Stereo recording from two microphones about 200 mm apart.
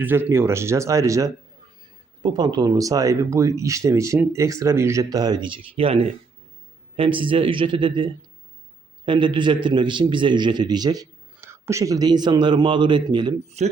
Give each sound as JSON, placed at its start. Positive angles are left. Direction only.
{"t": 0.0, "sound": "a man's voice", "side_deg": -10}
{"t": 13.6, "sound": "speech", "side_deg": -35}